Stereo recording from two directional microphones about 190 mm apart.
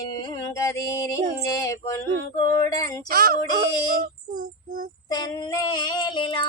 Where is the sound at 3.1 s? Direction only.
50° right (ahead or behind).